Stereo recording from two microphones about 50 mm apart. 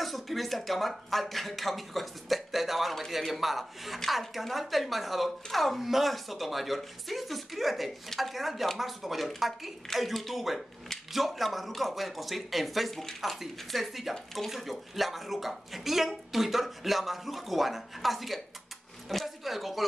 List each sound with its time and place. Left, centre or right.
0.0 s speech: centre